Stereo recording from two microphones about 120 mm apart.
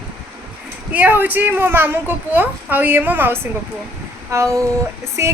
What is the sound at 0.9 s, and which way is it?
A child's voice, 15° right (ahead or behind).